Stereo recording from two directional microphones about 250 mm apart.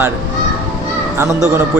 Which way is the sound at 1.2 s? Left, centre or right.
Centre.